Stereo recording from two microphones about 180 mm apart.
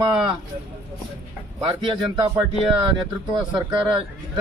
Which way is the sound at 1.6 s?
30° right (ahead or behind).